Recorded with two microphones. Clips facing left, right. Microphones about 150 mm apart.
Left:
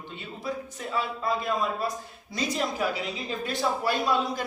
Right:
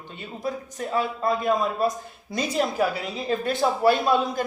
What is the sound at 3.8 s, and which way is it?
Speech, 55° right (ahead or behind).